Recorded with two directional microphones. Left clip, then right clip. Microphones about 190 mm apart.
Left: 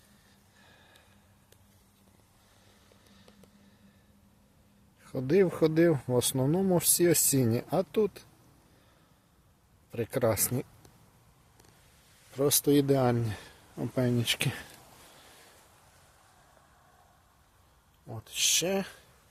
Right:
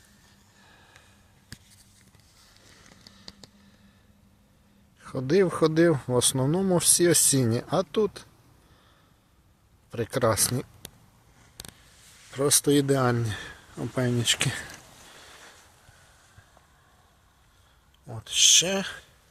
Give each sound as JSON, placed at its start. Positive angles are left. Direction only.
{"t": 4.9, "sound": "speech", "side_deg": 5}
{"t": 9.9, "sound": "speech", "side_deg": 5}
{"t": 12.3, "sound": "speech", "side_deg": 5}
{"t": 18.0, "sound": "speech", "side_deg": 0}